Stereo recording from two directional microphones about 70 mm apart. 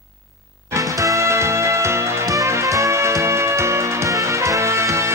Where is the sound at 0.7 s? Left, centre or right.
Right.